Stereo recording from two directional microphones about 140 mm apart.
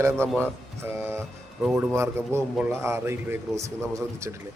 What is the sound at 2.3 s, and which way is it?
A man's voice, 20° right (ahead or behind).